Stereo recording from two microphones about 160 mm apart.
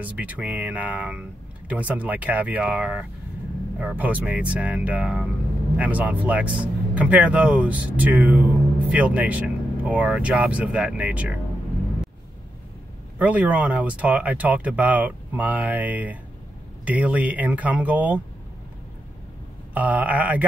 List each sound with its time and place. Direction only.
0.0 s speech: 10° right (ahead or behind)
13.2 s speech: 10° right (ahead or behind)
19.7 s speech: 10° right (ahead or behind)